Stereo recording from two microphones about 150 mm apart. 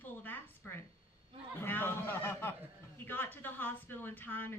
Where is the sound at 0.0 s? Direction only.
10° left (ahead or behind).